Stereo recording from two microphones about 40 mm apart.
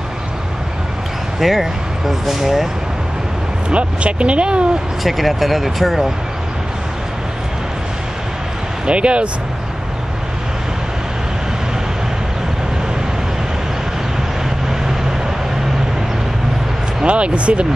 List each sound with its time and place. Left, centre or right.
1.4 s speech: centre
3.7 s speech: right
5.0 s speech: centre
8.8 s speech: right
17.0 s speech: right